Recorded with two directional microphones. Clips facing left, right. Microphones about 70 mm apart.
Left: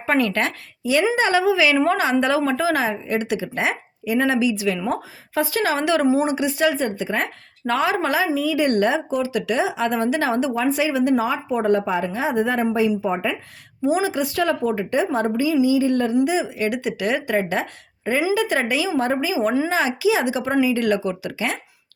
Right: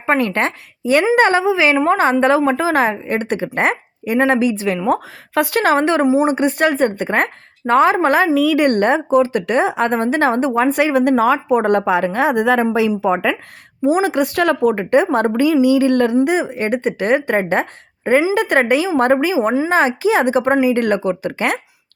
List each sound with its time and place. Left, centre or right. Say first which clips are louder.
0.0 s a woman's voice: right 3 dB; right
4.9 s speech: right 7 dB; right
5.8 s a woman's voice: right 4 dB; right
8.4 s speech: right 5 dB; right
11.2 s a woman's voice: right 7 dB; right
13.0 s a sound: right 6 dB; right
13.8 s a woman's voice: right 5 dB; right
15.6 s a sound: right 5 dB; right
16.2 s a woman's voice: right 4 dB; right
19.6 s speech: right 5 dB; right